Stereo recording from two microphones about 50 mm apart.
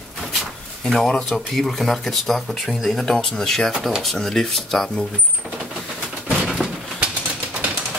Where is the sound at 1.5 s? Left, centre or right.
Centre.